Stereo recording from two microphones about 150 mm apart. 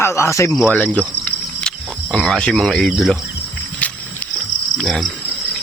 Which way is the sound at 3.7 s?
10° left (ahead or behind).